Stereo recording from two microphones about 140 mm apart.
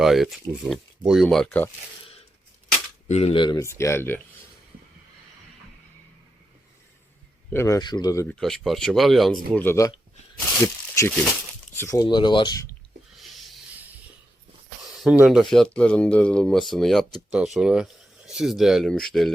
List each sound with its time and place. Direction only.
0.0 s speech: centre (ahead or behind)
3.1 s speech: 50° left (ahead or behind)
3.6 s speech: 20° left (ahead or behind)
7.5 s speech: 20° left (ahead or behind)
7.8 s speech: 30° left (ahead or behind)
8.3 s speech: centre (ahead or behind)
9.6 s speech: 20° left (ahead or behind)
10.4 s a sound: 15° left (ahead or behind)
11.7 s speech: 20° left (ahead or behind)
12.0 s speech: 35° left (ahead or behind)
13.1 s a sound: centre (ahead or behind)
15.0 s speech: 5° right (ahead or behind)